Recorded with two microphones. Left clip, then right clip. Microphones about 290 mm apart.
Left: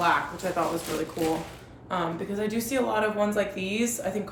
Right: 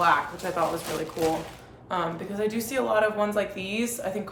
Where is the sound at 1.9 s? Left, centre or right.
Centre.